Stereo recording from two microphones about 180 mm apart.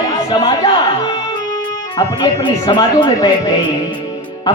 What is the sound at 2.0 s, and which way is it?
Speech, 25° left (ahead or behind).